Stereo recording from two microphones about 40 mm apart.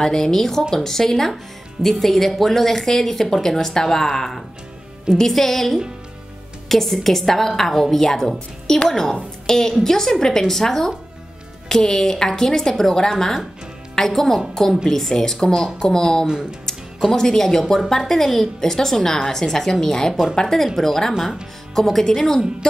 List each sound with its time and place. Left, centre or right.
0.0 s speech: centre